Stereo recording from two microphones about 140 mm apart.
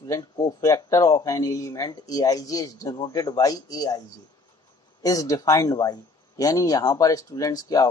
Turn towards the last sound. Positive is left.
turn(degrees=25)  # may be behind; listen again after turning